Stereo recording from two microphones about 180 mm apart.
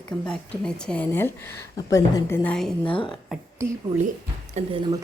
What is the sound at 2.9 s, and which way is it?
Speech, 30° left (ahead or behind).